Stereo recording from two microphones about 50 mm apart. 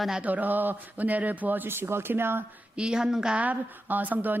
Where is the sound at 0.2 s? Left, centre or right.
Right.